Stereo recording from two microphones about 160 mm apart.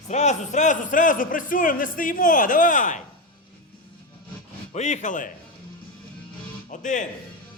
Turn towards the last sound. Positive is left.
turn(degrees=50)  # may be behind; listen again after turning